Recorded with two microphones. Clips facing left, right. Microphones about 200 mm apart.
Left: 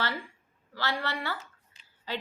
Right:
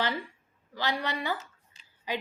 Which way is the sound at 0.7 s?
15° right (ahead or behind).